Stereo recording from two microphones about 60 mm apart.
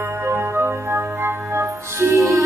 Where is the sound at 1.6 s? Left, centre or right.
Right.